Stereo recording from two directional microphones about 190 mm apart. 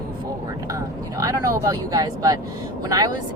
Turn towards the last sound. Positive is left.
turn(degrees=-20)  # may be behind; listen again after turning